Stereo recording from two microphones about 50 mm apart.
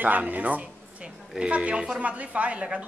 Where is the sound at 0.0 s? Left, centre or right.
Right.